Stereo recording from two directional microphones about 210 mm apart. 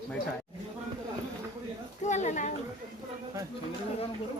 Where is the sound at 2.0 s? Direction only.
35° left (ahead or behind).